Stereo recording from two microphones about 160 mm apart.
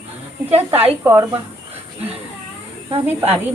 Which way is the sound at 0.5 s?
40° right (ahead or behind).